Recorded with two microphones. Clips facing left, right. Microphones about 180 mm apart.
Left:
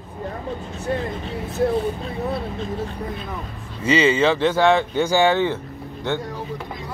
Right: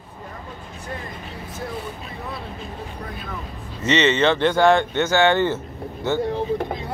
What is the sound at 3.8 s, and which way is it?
Speech, 10° left (ahead or behind).